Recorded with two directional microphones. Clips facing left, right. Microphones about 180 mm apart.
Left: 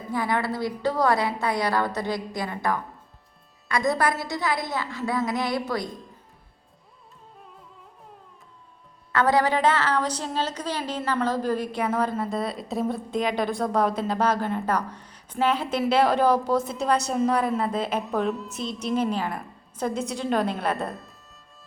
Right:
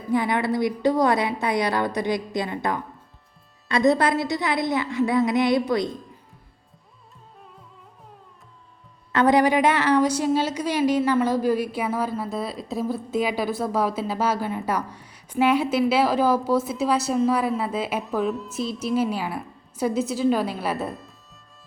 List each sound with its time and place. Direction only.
0.1 s a woman's voice: 20° right (ahead or behind)
9.1 s a woman's voice: 20° right (ahead or behind); by 21.2 s centre (ahead or behind)